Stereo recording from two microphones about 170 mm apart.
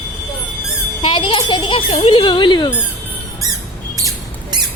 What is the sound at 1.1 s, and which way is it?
A child's voice, 30° left (ahead or behind).